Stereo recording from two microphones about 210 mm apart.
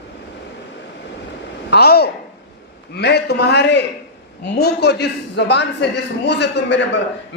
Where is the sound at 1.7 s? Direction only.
50° left (ahead or behind).